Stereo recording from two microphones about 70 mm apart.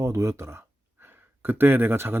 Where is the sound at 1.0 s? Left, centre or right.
Right.